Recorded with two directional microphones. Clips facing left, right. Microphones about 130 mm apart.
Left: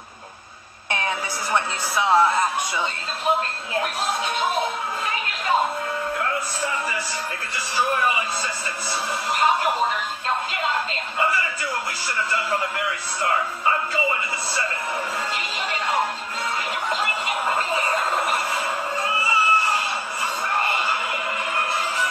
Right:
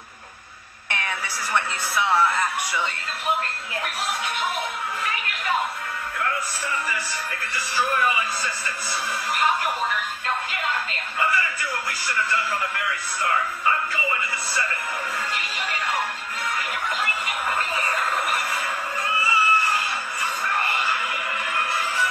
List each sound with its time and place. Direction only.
0.8 s a woman's voice: 25° left (ahead or behind)
4.4 s music: 25° left (ahead or behind)
7.7 s speech: 25° left (ahead or behind)
9.3 s speech: 25° left (ahead or behind)
10.5 s music: 25° left (ahead or behind)
12.3 s speech: 25° left (ahead or behind)
16.9 s a sound: 25° left (ahead or behind)
19.2 s music: 30° left (ahead or behind)